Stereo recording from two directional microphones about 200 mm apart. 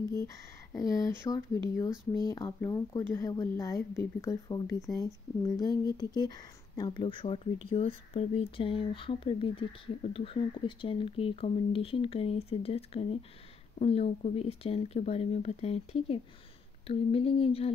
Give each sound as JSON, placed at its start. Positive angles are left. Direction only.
{"t": 0.1, "sound": "speech", "side_deg": 15}